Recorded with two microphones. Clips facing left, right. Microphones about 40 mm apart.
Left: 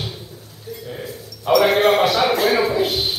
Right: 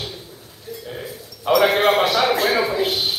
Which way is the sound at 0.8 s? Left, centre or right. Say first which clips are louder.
Left 1 dB; centre.